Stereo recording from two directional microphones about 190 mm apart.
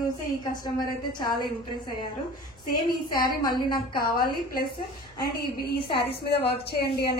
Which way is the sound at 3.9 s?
50° left (ahead or behind).